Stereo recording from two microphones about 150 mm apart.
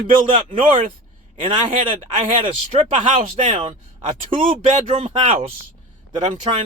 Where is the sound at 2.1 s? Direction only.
60° right (ahead or behind).